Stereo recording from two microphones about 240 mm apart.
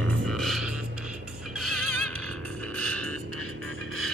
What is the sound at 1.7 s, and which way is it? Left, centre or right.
Music, right.